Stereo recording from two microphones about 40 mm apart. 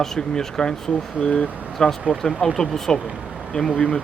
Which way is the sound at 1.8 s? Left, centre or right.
Centre.